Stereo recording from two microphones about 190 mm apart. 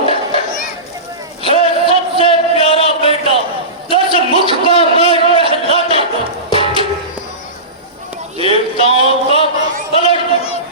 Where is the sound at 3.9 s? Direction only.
30° right (ahead or behind).